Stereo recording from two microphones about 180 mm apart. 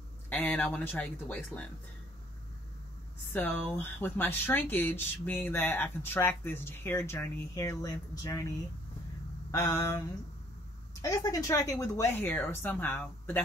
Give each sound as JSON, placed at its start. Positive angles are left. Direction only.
{"t": 0.3, "sound": "speech", "side_deg": 10}
{"t": 3.3, "sound": "speech", "side_deg": 10}